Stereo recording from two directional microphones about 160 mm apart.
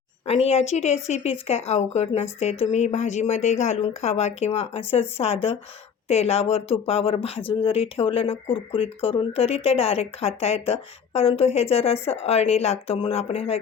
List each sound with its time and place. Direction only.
0.3 s speech: 40° left (ahead or behind)